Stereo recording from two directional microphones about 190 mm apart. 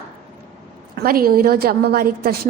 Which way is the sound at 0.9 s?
50° right (ahead or behind).